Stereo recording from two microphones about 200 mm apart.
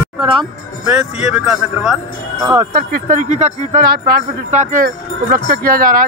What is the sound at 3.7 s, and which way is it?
Speech, 50° right (ahead or behind).